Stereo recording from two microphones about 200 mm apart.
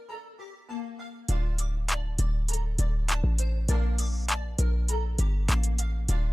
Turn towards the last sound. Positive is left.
turn(degrees=0)  # may be behind; listen again after turning